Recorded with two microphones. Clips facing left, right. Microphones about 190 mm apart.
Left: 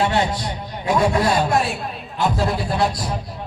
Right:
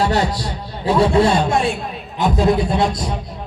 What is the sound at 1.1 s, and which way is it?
Speech, 25° right (ahead or behind).